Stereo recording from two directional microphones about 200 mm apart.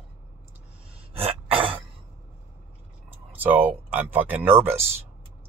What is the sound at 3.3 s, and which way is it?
Speech, 10° right (ahead or behind).